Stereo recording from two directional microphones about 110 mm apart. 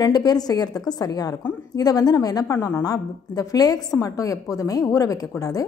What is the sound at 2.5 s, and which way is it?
Speech, 25° left (ahead or behind).